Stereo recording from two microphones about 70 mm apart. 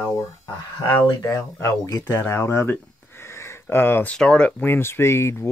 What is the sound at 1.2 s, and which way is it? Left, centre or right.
Speech, left.